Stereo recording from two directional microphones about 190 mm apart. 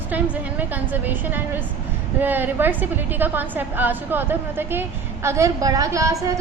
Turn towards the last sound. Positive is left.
turn(degrees=-15)  # may be behind; listen again after turning